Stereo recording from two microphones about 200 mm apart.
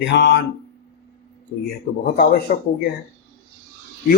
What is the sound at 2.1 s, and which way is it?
Speech, 45° left (ahead or behind).